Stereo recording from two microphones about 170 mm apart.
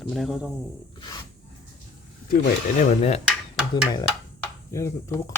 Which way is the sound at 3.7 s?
25° left (ahead or behind).